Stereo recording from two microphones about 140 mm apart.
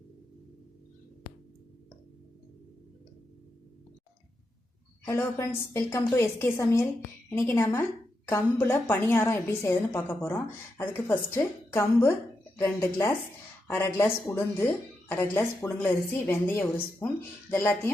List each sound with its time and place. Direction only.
5.0 s a woman's voice: 20° left (ahead or behind)
15.1 s a woman's voice: 15° left (ahead or behind)